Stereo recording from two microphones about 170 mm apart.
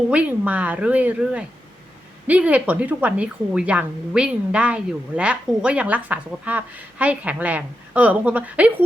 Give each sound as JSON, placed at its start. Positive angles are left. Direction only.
{"t": 0.1, "sound": "speech", "side_deg": -10}